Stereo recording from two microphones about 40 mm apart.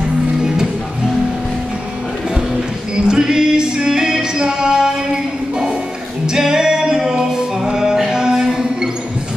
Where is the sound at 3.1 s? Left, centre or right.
Centre.